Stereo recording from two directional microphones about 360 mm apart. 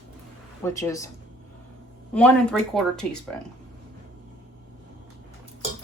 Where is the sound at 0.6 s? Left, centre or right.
Centre.